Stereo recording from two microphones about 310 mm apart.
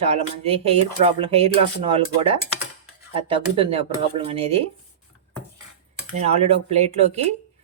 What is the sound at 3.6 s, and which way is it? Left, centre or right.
Speech, centre.